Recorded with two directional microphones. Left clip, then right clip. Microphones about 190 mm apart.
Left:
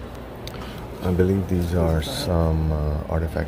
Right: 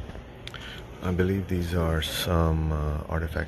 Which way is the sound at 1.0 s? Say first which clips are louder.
Left 6 dB; centre (ahead or behind).